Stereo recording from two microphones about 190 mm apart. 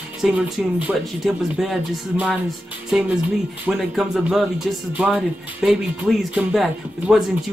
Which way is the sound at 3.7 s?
Centre (ahead or behind).